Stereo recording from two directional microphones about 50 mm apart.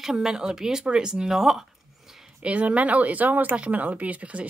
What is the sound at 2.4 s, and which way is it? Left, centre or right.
Speech, right.